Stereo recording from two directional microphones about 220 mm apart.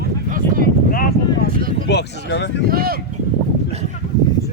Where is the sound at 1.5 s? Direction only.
40° right (ahead or behind).